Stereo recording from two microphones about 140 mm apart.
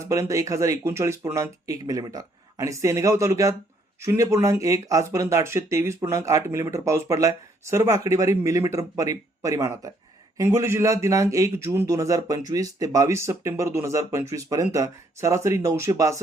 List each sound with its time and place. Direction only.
0.0 s speech: 20° right (ahead or behind)